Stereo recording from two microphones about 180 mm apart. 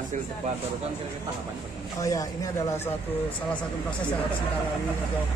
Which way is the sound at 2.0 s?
15° left (ahead or behind).